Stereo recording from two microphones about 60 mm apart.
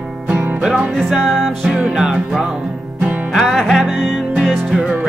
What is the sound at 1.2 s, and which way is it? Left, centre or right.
Music, centre.